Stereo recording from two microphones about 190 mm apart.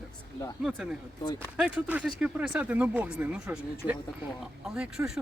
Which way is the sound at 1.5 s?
5° right (ahead or behind).